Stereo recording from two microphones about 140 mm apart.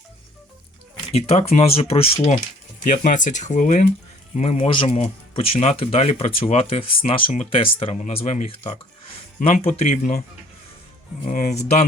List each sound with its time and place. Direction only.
1.1 s speech: 50° left (ahead or behind)
2.8 s speech: 60° left (ahead or behind)
4.4 s speech: 50° left (ahead or behind)
4.9 s speech: 50° left (ahead or behind)
8.0 s speech: 55° left (ahead or behind)
10.0 s speech: 90° left
11.3 s speech: 60° left (ahead or behind)